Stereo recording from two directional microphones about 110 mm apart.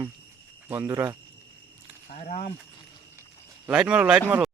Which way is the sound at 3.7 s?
5° right (ahead or behind).